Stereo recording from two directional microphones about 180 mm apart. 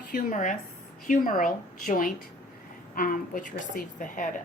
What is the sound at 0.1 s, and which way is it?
A woman's voice, 45° left (ahead or behind).